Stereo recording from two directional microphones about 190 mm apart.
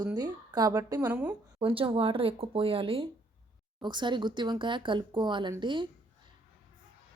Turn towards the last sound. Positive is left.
turn(degrees=-25)  # may be behind; listen again after turning